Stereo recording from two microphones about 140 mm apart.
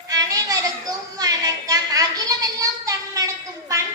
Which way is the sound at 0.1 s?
25° right (ahead or behind).